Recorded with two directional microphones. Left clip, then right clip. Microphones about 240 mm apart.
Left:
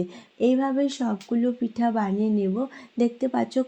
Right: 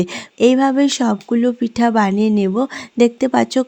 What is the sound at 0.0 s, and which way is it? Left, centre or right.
Speech, right.